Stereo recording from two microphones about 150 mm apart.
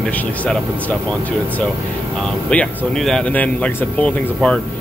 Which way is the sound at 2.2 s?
5° left (ahead or behind).